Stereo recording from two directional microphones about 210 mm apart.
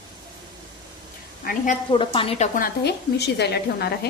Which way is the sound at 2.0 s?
25° left (ahead or behind).